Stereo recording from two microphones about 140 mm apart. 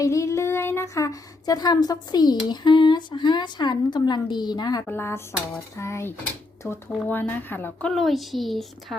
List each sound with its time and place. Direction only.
0.0 s speech: 20° left (ahead or behind)
4.9 s speech: 15° left (ahead or behind); by 9.0 s centre (ahead or behind)